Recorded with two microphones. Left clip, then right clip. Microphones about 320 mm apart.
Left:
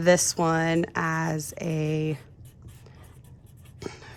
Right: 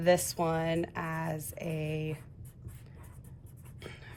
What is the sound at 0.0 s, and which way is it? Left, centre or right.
Speech, left.